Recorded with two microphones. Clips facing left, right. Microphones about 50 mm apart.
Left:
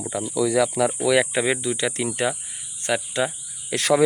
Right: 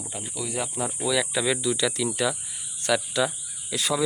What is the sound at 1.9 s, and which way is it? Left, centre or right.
Speech, left.